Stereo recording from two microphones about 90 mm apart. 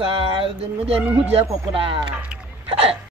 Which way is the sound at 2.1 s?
15° right (ahead or behind).